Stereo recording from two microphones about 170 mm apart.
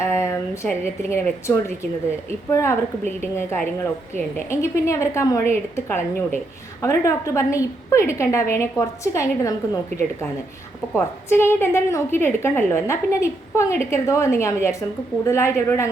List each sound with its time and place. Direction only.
0.0 s a woman's voice: 15° left (ahead or behind)
10.9 s a woman's voice: 15° left (ahead or behind)